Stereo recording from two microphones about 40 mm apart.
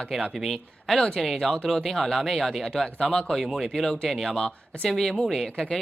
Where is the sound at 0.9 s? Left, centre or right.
Centre.